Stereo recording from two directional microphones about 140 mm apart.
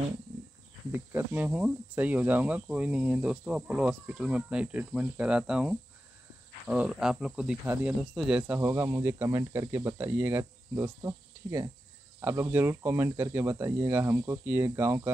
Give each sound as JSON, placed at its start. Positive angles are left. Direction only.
{"t": 0.9, "sound": "speech", "side_deg": -15}
{"t": 8.0, "sound": "speech", "side_deg": 0}